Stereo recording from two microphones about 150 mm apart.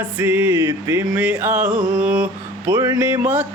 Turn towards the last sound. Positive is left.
turn(degrees=-15)  # may be behind; listen again after turning